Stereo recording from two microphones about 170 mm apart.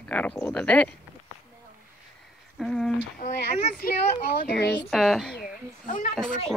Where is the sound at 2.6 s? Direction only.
5° left (ahead or behind).